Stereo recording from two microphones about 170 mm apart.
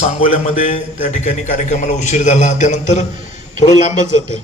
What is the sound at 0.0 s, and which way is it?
A man's voice, 35° left (ahead or behind).